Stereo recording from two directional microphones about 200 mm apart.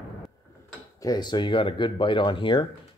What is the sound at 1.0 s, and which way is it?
Speech, 20° left (ahead or behind).